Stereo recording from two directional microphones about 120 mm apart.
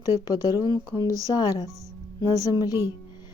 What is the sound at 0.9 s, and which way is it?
Speech, 30° left (ahead or behind).